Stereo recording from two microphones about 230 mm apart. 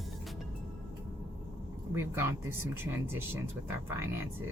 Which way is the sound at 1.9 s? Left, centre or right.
Centre.